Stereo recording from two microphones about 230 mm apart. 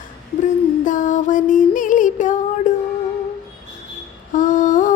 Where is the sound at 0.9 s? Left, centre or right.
Left.